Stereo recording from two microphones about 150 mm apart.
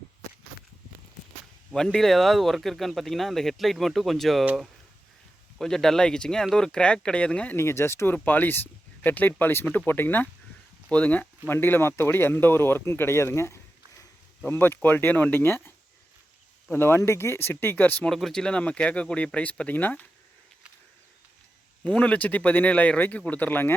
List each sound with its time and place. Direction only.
1.7 s speech: 5° left (ahead or behind)
21.8 s speech: 10° left (ahead or behind)